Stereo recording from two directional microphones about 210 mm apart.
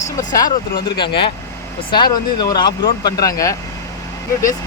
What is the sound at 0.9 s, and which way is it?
Speech, 25° left (ahead or behind).